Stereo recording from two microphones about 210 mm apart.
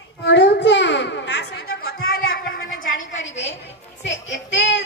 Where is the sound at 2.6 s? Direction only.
40° left (ahead or behind).